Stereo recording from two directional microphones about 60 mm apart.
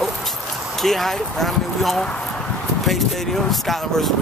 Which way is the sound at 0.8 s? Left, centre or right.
Centre.